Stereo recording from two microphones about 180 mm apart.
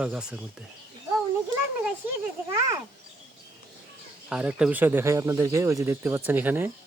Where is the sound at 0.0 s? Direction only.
5° right (ahead or behind).